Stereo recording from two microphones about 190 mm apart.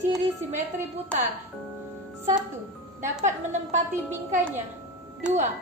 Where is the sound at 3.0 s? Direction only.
40° right (ahead or behind).